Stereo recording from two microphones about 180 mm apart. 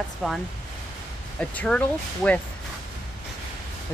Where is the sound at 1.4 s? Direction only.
5° left (ahead or behind).